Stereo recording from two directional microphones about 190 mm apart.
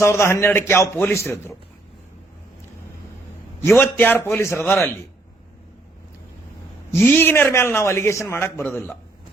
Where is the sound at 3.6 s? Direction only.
10° left (ahead or behind).